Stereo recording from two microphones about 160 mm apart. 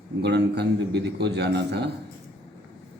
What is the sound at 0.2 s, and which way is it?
Speech, 90° right.